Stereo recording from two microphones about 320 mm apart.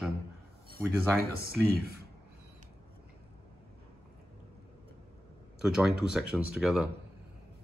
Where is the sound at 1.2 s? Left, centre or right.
Right.